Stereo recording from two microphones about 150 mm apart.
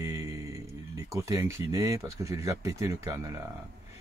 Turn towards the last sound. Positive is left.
turn(degrees=-20)  # may be behind; listen again after turning